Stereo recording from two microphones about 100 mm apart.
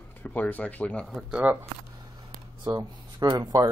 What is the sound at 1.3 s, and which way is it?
Speech, 15° right (ahead or behind).